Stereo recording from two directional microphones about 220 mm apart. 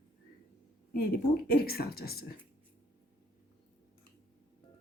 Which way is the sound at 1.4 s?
45° left (ahead or behind).